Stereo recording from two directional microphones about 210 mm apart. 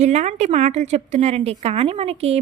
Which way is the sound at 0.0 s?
30° right (ahead or behind).